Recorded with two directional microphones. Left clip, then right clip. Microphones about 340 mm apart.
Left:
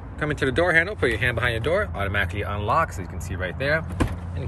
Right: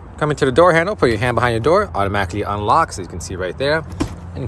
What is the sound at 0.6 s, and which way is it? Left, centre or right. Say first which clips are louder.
Speech: right 8 dB; centre.